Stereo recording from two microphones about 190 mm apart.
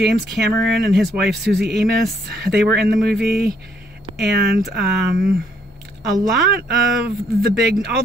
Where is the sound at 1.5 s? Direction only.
60° right (ahead or behind).